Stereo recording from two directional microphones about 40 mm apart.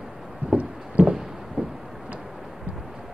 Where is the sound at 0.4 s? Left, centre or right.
Right.